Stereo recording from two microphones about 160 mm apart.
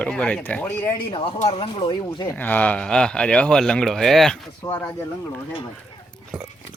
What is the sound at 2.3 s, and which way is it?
Speech, 10° left (ahead or behind).